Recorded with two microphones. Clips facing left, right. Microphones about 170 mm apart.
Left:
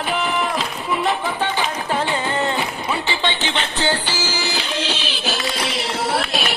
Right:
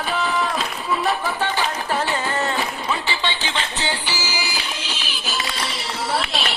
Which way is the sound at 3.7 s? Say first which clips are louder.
Left 5 dB; 60° left (ahead or behind).